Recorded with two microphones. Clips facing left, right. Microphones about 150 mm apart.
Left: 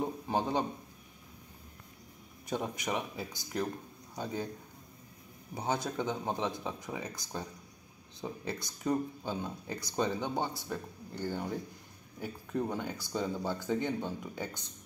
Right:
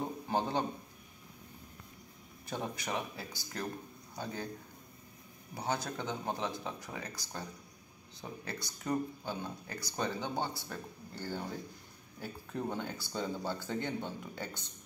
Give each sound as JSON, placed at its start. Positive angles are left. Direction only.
{"t": 0.0, "sound": "a sound", "side_deg": 10}
{"t": 2.4, "sound": "a man's voice", "side_deg": 15}
{"t": 5.5, "sound": "speech", "side_deg": 20}
{"t": 8.2, "sound": "speech", "side_deg": 20}
{"t": 12.5, "sound": "speech", "side_deg": 10}